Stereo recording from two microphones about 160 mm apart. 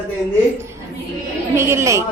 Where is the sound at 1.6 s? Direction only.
15° right (ahead or behind).